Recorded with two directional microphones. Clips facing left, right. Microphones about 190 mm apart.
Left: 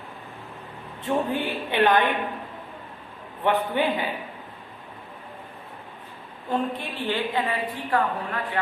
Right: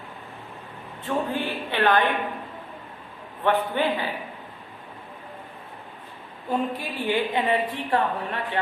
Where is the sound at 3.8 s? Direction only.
15° left (ahead or behind).